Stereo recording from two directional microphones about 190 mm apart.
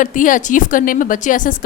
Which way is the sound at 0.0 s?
45° left (ahead or behind).